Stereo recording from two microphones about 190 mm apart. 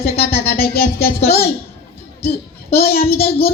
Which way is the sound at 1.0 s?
55° left (ahead or behind).